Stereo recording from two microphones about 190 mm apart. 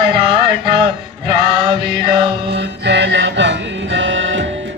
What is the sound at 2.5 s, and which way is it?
Music, 65° right (ahead or behind).